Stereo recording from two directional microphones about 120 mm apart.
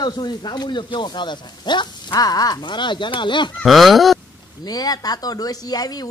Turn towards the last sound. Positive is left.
turn(degrees=35)  # may be behind; listen again after turning